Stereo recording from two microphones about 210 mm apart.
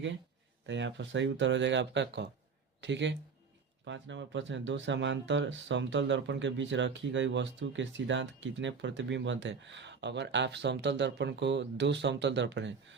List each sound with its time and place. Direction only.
0.7 s speech: 60° right (ahead or behind)